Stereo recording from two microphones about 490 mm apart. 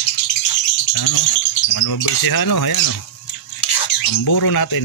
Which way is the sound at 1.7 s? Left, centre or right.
Left.